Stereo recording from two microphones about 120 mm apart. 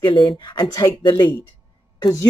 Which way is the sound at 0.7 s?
25° left (ahead or behind).